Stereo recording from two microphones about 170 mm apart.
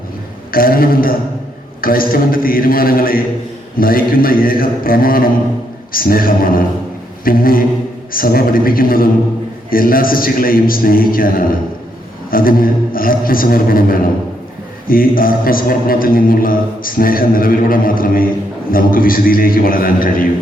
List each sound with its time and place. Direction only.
0.5 s speech: 60° left (ahead or behind)